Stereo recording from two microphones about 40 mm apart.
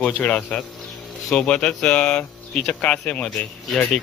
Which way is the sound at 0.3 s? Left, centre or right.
Left.